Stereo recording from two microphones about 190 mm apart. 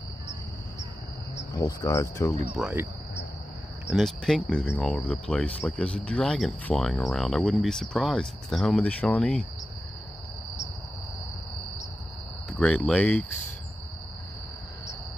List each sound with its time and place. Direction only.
1.5 s cricket: 20° left (ahead or behind)
2.5 s cricket: 10° right (ahead or behind)
3.8 s speech: centre (ahead or behind)
12.4 s speech: 5° left (ahead or behind)